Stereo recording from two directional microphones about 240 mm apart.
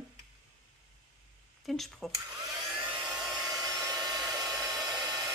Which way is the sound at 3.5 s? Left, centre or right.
Centre.